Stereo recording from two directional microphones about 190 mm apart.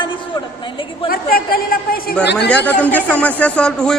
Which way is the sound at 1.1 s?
50° left (ahead or behind).